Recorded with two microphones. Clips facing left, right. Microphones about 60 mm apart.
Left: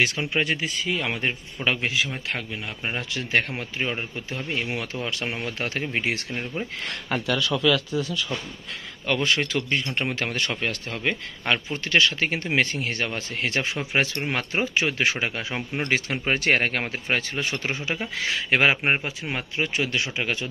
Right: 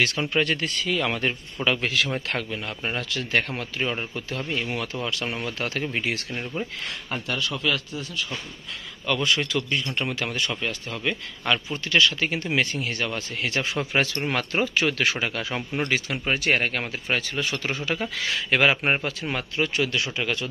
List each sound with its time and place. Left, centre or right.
0.2 s a man's voice: centre
2.0 s speech: centre
3.0 s a man's voice: left
6.3 s a man's voice: centre
9.0 s a man's voice: left
11.4 s a man's voice: left
15.9 s a man's voice: left
18.8 s a man's voice: centre